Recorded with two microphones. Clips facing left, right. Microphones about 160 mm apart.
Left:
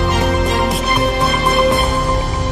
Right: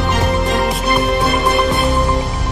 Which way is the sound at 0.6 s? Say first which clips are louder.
Left 1 dB; centre (ahead or behind).